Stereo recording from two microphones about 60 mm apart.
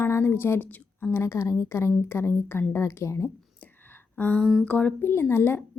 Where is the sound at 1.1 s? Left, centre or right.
Left.